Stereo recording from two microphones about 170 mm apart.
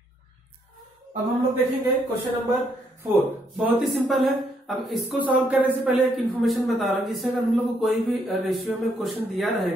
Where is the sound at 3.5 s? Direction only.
Centre (ahead or behind).